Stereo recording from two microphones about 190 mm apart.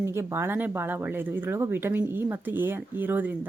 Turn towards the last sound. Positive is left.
turn(degrees=-10)  # may be behind; listen again after turning